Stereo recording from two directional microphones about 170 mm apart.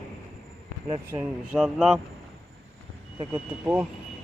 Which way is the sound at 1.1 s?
5° right (ahead or behind).